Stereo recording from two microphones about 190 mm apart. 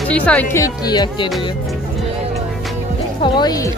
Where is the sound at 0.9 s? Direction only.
20° left (ahead or behind).